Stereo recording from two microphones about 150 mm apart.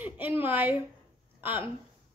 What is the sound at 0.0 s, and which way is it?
Speech, 10° right (ahead or behind).